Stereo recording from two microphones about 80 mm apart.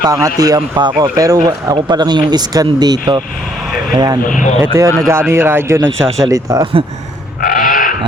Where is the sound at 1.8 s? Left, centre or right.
Right.